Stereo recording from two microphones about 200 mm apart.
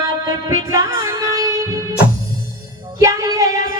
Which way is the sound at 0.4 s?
15° right (ahead or behind).